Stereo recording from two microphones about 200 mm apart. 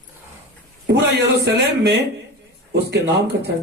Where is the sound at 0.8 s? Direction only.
60° right (ahead or behind).